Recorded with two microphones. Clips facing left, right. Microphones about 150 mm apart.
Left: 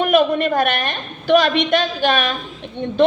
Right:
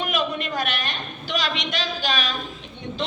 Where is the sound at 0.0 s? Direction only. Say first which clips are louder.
Left 11 dB; 55° left (ahead or behind).